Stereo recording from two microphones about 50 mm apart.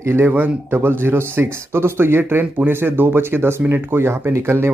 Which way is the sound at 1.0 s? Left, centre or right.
Right.